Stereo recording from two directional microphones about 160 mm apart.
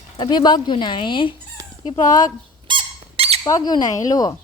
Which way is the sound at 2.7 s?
35° right (ahead or behind).